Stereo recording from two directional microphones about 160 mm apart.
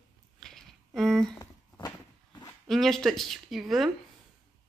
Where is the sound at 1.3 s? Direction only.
20° left (ahead or behind).